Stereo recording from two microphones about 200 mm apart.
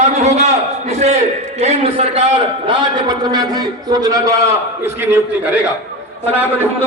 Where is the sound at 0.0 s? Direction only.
35° right (ahead or behind); by 5.5 s 10° right (ahead or behind).